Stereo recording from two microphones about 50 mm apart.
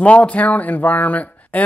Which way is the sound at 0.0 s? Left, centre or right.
Left.